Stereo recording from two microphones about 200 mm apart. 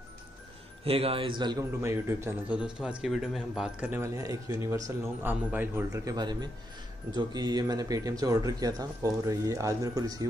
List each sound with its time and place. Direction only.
0.8 s a man's voice: 30° right (ahead or behind)